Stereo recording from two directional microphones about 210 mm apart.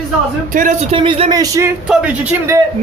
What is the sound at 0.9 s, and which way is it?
Speech, 25° right (ahead or behind).